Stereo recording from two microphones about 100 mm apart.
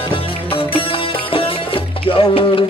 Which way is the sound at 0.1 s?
65° left (ahead or behind).